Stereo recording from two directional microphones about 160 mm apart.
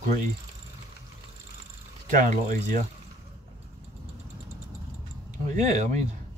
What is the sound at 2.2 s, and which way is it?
Speech, 50° right (ahead or behind).